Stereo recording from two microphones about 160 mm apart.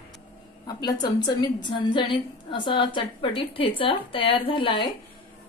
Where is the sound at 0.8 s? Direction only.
25° left (ahead or behind).